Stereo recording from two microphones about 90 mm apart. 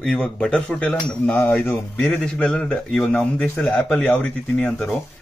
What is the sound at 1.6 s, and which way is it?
Speech, 25° left (ahead or behind).